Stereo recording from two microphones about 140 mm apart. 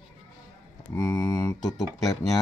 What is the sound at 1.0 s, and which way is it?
Speech, 30° left (ahead or behind).